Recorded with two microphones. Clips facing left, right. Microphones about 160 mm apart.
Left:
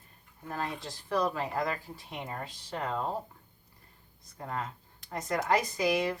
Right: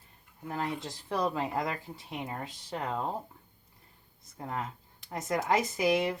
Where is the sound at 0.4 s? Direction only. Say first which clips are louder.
Right 2 dB; 15° right (ahead or behind).